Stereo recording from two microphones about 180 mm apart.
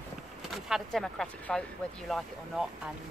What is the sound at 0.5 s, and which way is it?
Speech, centre (ahead or behind).